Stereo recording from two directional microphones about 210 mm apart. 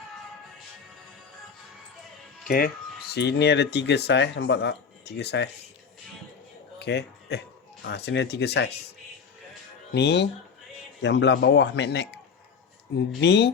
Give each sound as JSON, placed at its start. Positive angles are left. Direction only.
{"t": 3.2, "sound": "speech", "side_deg": 50}
{"t": 6.7, "sound": "a man's voice", "side_deg": 55}
{"t": 9.9, "sound": "a man's voice", "side_deg": 55}